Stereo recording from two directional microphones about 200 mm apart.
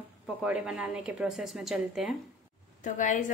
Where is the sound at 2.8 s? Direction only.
40° left (ahead or behind).